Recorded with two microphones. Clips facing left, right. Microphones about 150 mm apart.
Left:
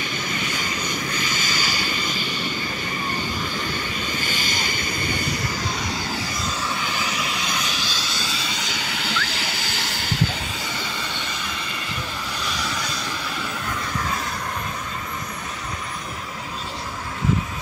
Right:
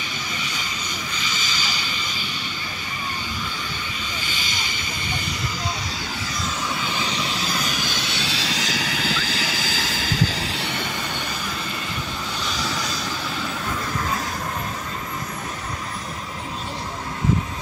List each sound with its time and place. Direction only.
0.4 s vehicle: 50° left (ahead or behind)
4.1 s vehicle: 50° left (ahead or behind)
7.2 s vehicle: 35° right (ahead or behind); by 10.9 s 65° right (ahead or behind)